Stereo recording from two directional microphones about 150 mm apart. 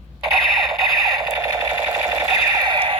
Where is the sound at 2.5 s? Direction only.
30° right (ahead or behind).